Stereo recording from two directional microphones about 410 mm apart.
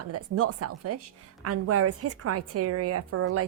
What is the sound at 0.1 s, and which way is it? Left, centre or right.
A woman's voice, right.